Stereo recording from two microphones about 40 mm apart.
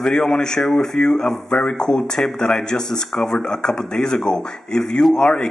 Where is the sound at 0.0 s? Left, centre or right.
Centre.